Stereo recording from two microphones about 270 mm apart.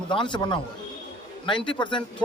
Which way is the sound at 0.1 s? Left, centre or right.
Centre.